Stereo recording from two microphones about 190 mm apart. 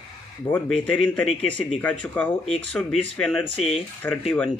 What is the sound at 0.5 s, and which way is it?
Speech, 5° left (ahead or behind).